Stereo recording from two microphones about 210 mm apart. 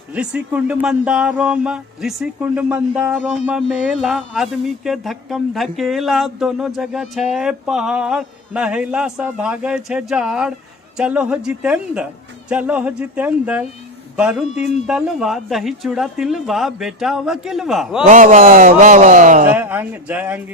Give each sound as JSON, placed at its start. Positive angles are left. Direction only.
{"t": 0.1, "sound": "speech", "side_deg": -5}
{"t": 18.0, "sound": "speech", "side_deg": -40}
{"t": 19.5, "sound": "speech", "side_deg": -10}